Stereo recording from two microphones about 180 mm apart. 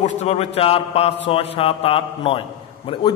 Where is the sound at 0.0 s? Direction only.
40° left (ahead or behind).